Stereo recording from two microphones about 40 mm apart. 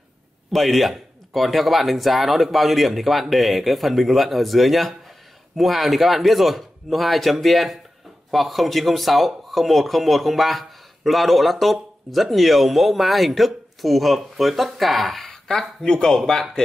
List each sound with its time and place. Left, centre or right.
0.5 s speech: centre
15.8 s speech: centre